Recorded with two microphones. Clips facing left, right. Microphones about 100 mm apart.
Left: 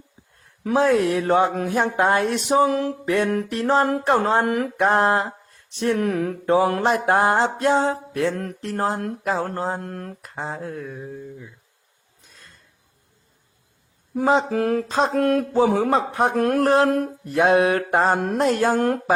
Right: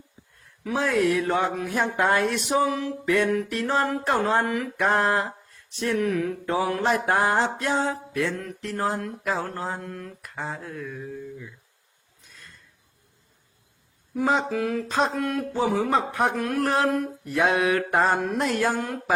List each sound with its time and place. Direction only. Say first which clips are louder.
0.4 s speech: left 8 dB; 40° left (ahead or behind)
10.2 s speech: left 2 dB; 30° left (ahead or behind)
14.1 s speech: left 4 dB; 30° left (ahead or behind)
14.5 s speech: left 5 dB; 45° left (ahead or behind)
14.8 s speech: left 3 dB; 35° left (ahead or behind)
15.1 s speech: left 8 dB; 50° left (ahead or behind)